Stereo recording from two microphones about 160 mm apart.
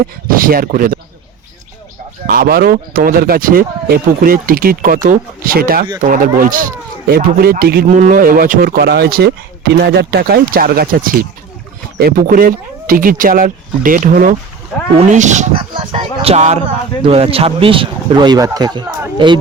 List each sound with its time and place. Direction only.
0.3 s speech: 60° right (ahead or behind)
2.2 s speech: 70° right (ahead or behind)
7.9 s speech: 55° right (ahead or behind)
15.7 s speech: 30° right (ahead or behind)